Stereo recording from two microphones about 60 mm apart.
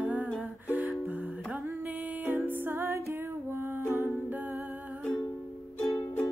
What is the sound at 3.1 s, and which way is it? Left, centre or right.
Music, right.